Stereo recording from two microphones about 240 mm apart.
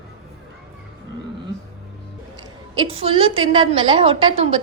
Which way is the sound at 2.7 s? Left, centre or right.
Right.